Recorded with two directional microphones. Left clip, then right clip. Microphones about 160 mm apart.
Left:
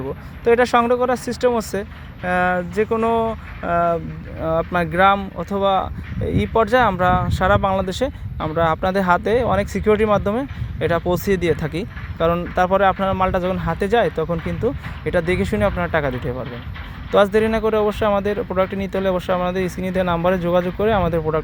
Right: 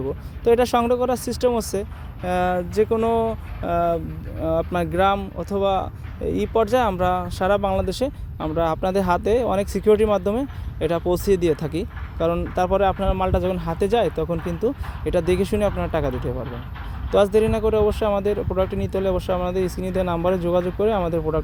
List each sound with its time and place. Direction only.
0.4 s speech: 20° right (ahead or behind); by 21.4 s 5° right (ahead or behind)